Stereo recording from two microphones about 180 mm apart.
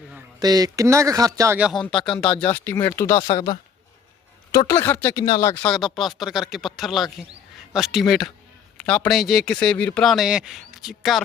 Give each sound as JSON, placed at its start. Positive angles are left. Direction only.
{"t": 0.3, "sound": "speech", "side_deg": -20}
{"t": 4.5, "sound": "speech", "side_deg": 15}
{"t": 5.6, "sound": "speech", "side_deg": 0}